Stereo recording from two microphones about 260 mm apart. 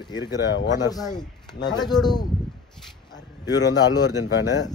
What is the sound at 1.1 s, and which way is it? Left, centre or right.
Speech, centre.